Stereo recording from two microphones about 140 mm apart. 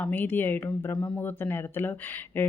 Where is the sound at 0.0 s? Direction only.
10° left (ahead or behind).